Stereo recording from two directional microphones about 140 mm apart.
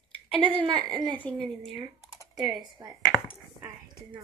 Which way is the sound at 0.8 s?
30° right (ahead or behind).